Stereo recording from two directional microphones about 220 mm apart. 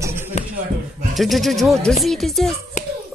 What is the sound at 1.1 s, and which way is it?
Music, centre (ahead or behind).